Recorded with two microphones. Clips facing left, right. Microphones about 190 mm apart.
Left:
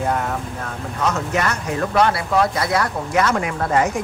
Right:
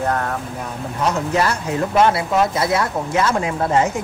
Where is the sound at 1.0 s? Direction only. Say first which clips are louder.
Right 2 dB; 30° right (ahead or behind).